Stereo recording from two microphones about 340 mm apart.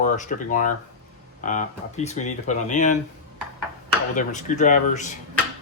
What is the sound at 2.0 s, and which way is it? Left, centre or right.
Speech, left.